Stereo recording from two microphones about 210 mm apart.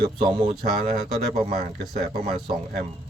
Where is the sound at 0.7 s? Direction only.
Centre (ahead or behind).